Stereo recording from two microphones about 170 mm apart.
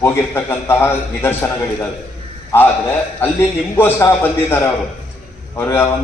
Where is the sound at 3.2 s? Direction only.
15° left (ahead or behind).